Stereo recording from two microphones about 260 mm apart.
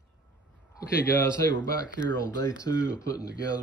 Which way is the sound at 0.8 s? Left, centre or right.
Centre.